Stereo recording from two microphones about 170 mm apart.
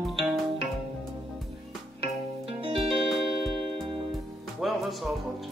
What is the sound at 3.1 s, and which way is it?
Music, 5° left (ahead or behind).